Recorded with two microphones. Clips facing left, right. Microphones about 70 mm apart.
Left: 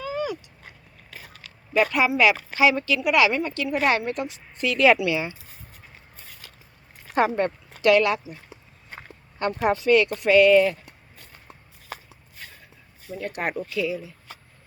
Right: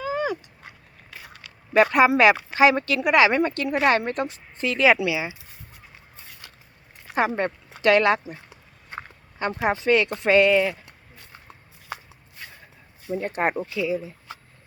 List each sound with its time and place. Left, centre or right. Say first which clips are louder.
0.0 s a sound: right 2 dB; right
1.7 s speech: right 4 dB; right
5.0 s speech: left 1 dB; centre
7.1 s speech: left 1 dB; centre
7.3 s speech: left 1 dB; right
9.4 s speech: left 1 dB; right
10.5 s speech: left 3 dB; centre
13.1 s speech: right 4 dB; right